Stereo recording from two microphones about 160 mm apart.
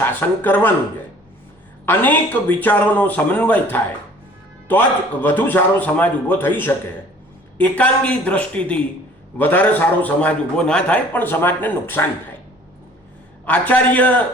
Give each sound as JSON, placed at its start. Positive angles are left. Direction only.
{"t": 0.0, "sound": "a man's voice", "side_deg": 10}
{"t": 1.9, "sound": "a man's voice", "side_deg": 10}
{"t": 13.4, "sound": "a man's voice", "side_deg": 10}